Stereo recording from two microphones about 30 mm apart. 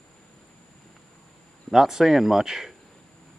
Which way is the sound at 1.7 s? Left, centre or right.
Centre.